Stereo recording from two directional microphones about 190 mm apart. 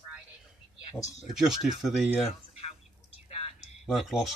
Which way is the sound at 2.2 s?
35° left (ahead or behind).